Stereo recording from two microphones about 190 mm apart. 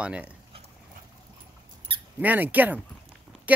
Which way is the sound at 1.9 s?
30° right (ahead or behind).